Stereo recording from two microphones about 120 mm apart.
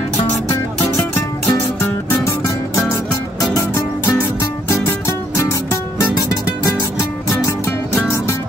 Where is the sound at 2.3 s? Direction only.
25° left (ahead or behind).